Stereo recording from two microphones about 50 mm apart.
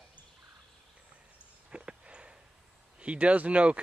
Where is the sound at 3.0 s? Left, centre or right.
Right.